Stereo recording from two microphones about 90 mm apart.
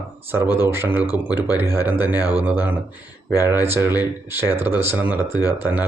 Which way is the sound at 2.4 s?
20° right (ahead or behind).